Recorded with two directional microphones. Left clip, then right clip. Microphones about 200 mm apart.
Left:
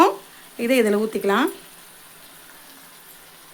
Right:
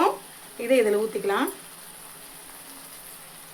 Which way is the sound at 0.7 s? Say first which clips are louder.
Left 2 dB; 60° left (ahead or behind).